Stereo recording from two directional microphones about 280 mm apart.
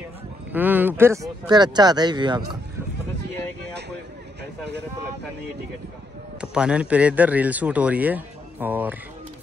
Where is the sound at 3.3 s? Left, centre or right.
Right.